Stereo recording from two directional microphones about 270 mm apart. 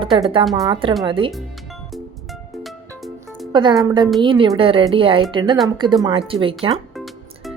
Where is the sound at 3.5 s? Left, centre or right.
Centre.